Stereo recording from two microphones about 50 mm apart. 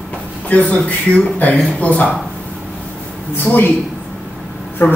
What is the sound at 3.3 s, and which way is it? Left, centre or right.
Speech, left.